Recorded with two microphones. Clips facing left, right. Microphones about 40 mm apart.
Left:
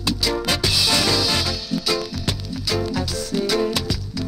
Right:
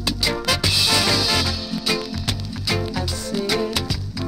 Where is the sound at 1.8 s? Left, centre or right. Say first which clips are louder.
Right 1 dB; centre.